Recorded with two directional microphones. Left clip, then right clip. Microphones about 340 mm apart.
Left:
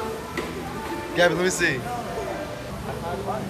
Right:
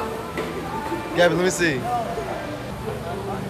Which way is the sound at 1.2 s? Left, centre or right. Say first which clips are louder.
Right 2 dB; centre.